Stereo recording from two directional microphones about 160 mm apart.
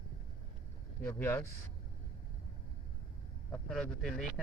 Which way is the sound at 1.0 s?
15° left (ahead or behind).